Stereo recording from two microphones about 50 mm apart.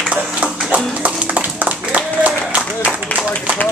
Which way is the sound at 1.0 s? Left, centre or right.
Right.